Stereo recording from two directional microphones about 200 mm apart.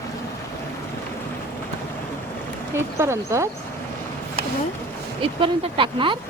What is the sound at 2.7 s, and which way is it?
Speech, 15° right (ahead or behind).